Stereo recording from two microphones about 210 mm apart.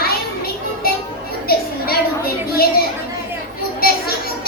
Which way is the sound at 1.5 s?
45° left (ahead or behind).